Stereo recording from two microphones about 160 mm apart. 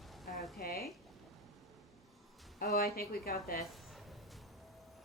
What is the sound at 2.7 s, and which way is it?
Speech, 70° left (ahead or behind).